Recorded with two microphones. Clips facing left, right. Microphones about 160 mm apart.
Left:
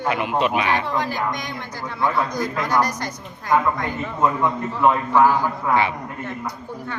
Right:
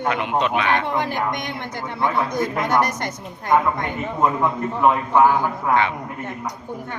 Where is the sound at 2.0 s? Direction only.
20° right (ahead or behind).